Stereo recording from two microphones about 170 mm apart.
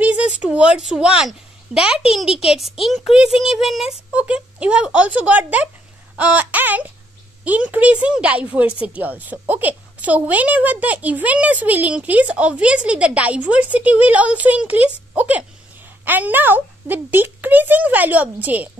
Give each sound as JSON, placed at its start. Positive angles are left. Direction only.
{"t": 0.0, "sound": "a woman's voice", "side_deg": -10}